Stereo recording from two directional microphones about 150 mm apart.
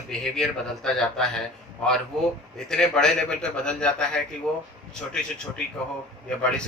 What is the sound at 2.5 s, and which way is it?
A man's voice, 5° left (ahead or behind).